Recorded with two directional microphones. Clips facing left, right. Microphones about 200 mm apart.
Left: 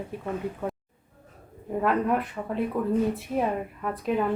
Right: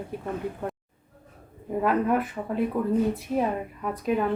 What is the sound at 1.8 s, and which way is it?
Speech, centre (ahead or behind).